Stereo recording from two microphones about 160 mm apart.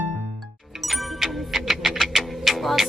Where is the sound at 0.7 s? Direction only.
Centre (ahead or behind).